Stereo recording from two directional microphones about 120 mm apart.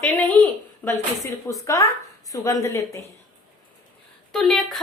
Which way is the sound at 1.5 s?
25° left (ahead or behind).